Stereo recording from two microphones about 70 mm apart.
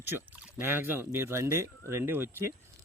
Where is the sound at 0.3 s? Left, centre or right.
Centre.